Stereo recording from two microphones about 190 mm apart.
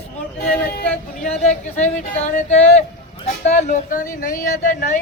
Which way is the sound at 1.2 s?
35° left (ahead or behind).